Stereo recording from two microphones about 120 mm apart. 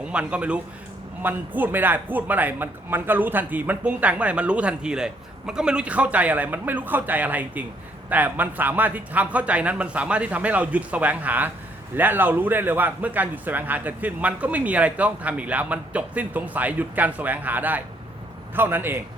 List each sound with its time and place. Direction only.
0.0 s a man's voice: 10° right (ahead or behind)